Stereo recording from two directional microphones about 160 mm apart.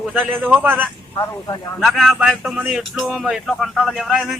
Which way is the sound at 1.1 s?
20° left (ahead or behind).